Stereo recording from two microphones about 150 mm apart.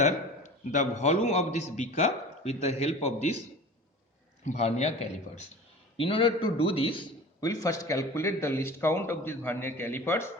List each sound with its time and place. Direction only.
0.0 s a man's voice: 55° left (ahead or behind)
4.4 s a man's voice: 45° left (ahead or behind)
7.4 s a man's voice: 20° left (ahead or behind)